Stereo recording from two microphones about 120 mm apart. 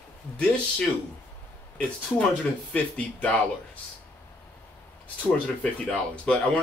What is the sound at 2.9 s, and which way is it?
Speech, 10° left (ahead or behind).